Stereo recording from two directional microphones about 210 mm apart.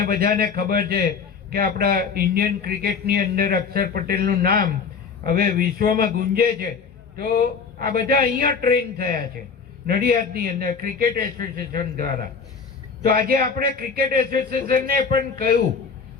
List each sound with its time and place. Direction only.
0.0 s a man's voice: 45° right (ahead or behind)
8.1 s a man's voice: 45° right (ahead or behind)